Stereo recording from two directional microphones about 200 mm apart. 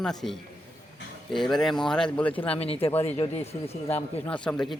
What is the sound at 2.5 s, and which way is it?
Speech, 30° left (ahead or behind).